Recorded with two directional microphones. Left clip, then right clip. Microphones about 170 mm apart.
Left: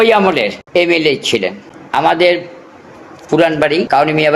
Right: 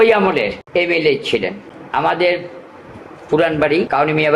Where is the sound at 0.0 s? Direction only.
40° left (ahead or behind).